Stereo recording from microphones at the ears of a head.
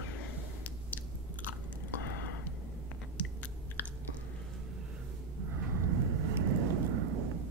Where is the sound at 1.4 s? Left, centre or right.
Left.